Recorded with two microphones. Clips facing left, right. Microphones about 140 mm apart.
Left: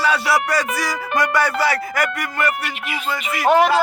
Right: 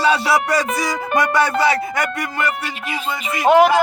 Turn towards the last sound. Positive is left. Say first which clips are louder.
# right 2 dB
turn(degrees=-20)  # may be behind; listen again after turning